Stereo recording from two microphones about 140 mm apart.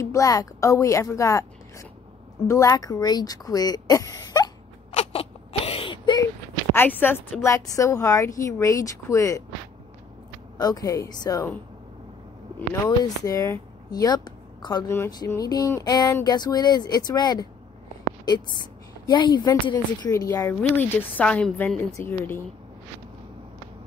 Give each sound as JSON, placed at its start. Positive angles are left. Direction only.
{"t": 0.0, "sound": "a woman's voice", "side_deg": 25}
{"t": 4.9, "sound": "a sound", "side_deg": 45}
{"t": 6.7, "sound": "speech", "side_deg": 15}
{"t": 10.6, "sound": "speech", "side_deg": 25}
{"t": 12.8, "sound": "a woman's voice", "side_deg": 25}